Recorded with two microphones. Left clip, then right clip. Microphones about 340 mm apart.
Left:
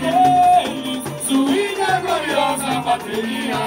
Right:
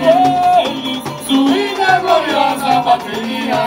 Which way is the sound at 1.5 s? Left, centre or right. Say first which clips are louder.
Right 6 dB; centre.